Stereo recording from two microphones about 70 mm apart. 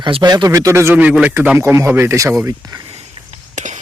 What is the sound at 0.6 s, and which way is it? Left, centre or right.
Speech, right.